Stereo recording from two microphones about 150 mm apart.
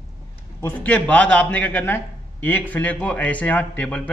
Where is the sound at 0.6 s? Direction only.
15° left (ahead or behind).